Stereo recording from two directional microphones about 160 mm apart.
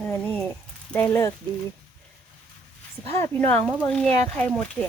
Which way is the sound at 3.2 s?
10° left (ahead or behind).